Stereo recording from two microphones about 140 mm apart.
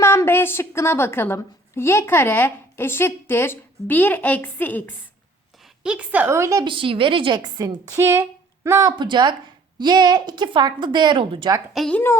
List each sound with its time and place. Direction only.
0.0 s a woman's voice: 20° left (ahead or behind)
5.8 s a woman's voice: 10° right (ahead or behind)
6.7 s a woman's voice: 40° right (ahead or behind)
11.7 s a woman's voice: centre (ahead or behind)